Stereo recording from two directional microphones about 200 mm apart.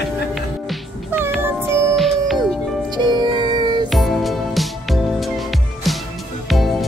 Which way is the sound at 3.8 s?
Centre (ahead or behind).